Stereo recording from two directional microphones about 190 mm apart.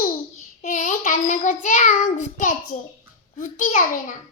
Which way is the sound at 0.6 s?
40° left (ahead or behind).